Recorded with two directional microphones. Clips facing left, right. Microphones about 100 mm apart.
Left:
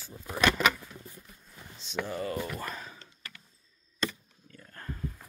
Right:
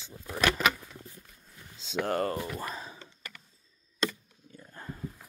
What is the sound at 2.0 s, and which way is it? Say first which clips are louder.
Speech: right 7 dB; 70° right (ahead or behind).